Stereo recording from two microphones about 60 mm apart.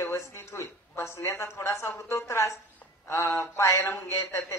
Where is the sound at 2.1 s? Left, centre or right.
Left.